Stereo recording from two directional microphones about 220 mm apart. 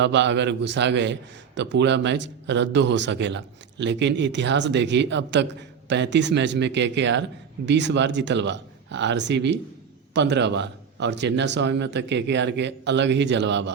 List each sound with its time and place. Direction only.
0.0 s speech: 55° right (ahead or behind)